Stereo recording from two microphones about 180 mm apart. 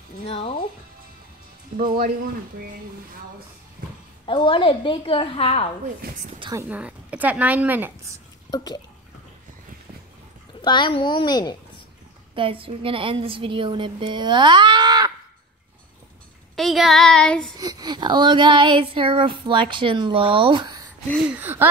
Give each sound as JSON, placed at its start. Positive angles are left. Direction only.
{"t": 0.3, "sound": "speech", "side_deg": 35}
{"t": 1.8, "sound": "speech", "side_deg": -55}
{"t": 4.3, "sound": "a woman's voice", "side_deg": 30}
{"t": 6.0, "sound": "speech", "side_deg": -55}
{"t": 6.7, "sound": "a woman's voice", "side_deg": -5}
{"t": 8.5, "sound": "speech", "side_deg": 20}
{"t": 10.6, "sound": "a woman's voice", "side_deg": 25}
{"t": 12.4, "sound": "child singing", "side_deg": -30}
{"t": 16.5, "sound": "child singing", "side_deg": 0}
{"t": 17.6, "sound": "child singing", "side_deg": -20}
{"t": 21.4, "sound": "a woman's voice", "side_deg": -10}